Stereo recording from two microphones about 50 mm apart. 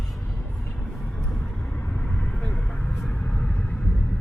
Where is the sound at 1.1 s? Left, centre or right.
Left.